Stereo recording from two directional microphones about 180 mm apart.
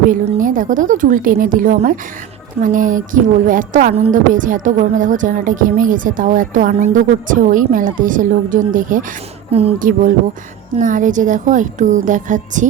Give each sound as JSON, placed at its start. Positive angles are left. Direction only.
{"t": 0.1, "sound": "a woman's voice", "side_deg": -50}
{"t": 9.5, "sound": "speech", "side_deg": -35}
{"t": 9.7, "sound": "a woman's voice", "side_deg": -50}